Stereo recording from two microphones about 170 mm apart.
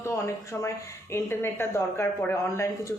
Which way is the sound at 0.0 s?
15° left (ahead or behind).